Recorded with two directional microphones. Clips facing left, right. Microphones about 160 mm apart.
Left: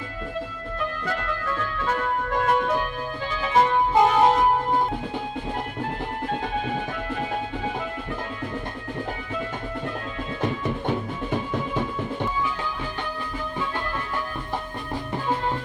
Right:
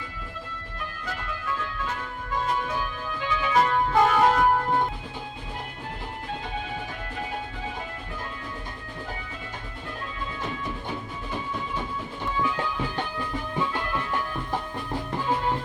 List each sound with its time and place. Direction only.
1.2 s music: 65° left (ahead or behind)
3.1 s music: 40° left (ahead or behind); by 4.8 s 20° left (ahead or behind)